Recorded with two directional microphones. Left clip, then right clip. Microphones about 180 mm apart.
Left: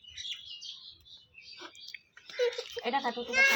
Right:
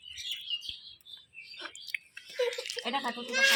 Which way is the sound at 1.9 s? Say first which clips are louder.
Right 10 dB; 15° left (ahead or behind).